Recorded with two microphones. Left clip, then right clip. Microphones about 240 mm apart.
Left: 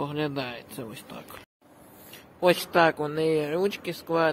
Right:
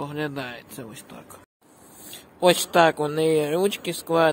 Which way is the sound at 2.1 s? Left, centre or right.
Right.